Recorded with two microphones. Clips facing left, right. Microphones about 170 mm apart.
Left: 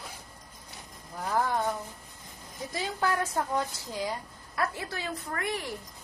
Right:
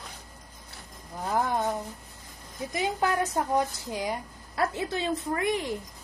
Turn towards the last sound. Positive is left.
turn(degrees=-20)  # may be behind; listen again after turning